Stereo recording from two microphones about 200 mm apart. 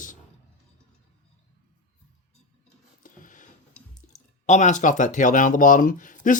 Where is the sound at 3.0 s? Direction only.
40° left (ahead or behind).